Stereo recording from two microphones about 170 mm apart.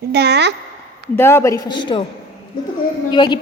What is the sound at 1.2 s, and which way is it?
Speech, 15° left (ahead or behind).